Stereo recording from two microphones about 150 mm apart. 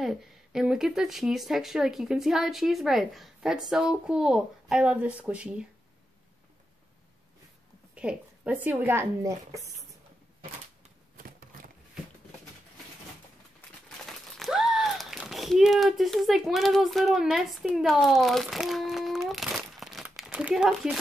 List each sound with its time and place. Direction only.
0.0 s speech: 5° right (ahead or behind)
7.9 s a woman's voice: 10° right (ahead or behind)
11.1 s a sound: 65° right (ahead or behind)
14.4 s speech: centre (ahead or behind)